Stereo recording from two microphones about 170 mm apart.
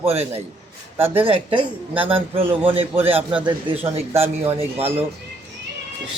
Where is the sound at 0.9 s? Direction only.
10° right (ahead or behind).